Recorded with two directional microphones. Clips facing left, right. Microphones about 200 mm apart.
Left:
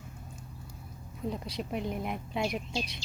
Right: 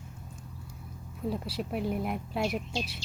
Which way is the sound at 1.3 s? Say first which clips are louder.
Right 2 dB; 5° right (ahead or behind).